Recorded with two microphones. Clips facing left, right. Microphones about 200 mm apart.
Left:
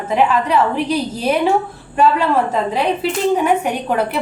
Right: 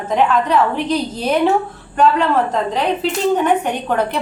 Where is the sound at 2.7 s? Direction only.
10° left (ahead or behind).